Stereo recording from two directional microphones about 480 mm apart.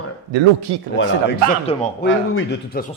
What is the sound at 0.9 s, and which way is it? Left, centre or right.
Speech, left.